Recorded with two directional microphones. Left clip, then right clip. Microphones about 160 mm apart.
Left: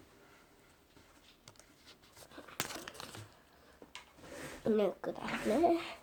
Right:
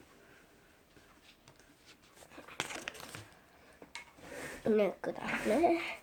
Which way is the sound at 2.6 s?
30° left (ahead or behind).